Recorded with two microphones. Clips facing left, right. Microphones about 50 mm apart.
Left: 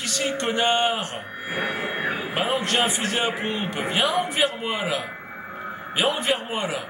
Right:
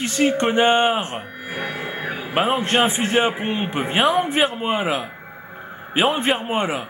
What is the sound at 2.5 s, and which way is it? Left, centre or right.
A man's voice, right.